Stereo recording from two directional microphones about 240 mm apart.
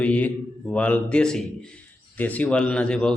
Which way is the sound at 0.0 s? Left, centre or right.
Centre.